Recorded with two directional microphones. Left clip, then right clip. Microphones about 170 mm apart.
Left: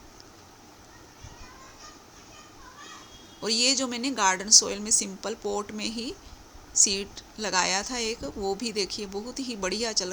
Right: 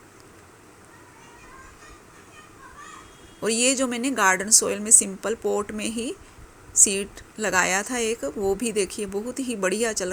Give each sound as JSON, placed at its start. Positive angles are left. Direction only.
{"t": 3.4, "sound": "a woman's voice", "side_deg": -20}